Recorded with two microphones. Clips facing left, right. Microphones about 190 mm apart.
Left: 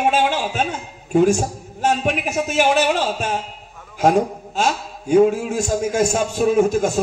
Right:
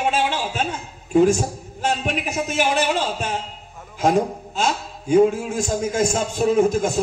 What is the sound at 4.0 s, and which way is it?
A man's voice, 50° left (ahead or behind).